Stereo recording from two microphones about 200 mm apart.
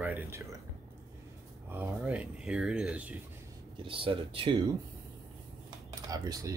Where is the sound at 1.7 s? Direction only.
10° right (ahead or behind).